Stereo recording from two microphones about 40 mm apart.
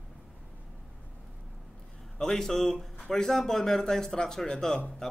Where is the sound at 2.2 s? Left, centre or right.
Centre.